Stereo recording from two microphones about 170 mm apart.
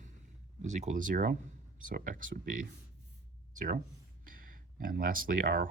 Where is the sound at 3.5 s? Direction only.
50° right (ahead or behind).